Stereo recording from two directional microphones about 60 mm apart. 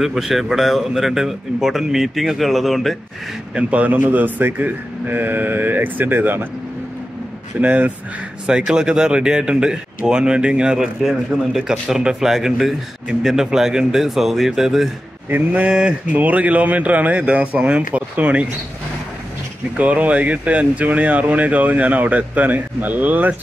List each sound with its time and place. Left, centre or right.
0.0 s a man's voice: centre
3.5 s a man's voice: right
7.6 s speech: right
8.5 s speech: centre
15.2 s a man's voice: right
19.8 s speech: right